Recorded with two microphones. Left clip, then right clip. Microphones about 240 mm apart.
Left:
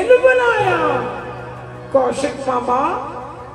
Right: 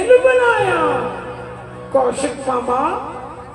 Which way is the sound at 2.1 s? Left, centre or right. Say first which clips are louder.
Even; left.